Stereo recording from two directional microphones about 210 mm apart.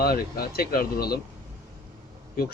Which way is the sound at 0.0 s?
45° left (ahead or behind).